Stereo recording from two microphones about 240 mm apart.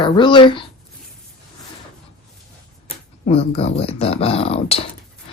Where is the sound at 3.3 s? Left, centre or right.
Left.